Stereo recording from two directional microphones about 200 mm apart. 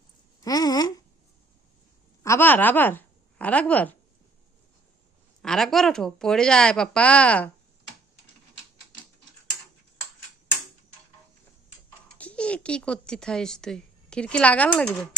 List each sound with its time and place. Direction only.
0.4 s speech: 20° left (ahead or behind)
2.2 s speech: 10° left (ahead or behind)
5.4 s speech: centre (ahead or behind)
12.1 s speech: 5° left (ahead or behind)